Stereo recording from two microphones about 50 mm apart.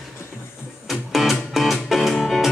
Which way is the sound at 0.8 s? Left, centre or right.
Centre.